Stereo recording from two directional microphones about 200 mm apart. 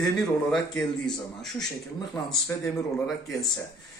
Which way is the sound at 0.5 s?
Centre (ahead or behind).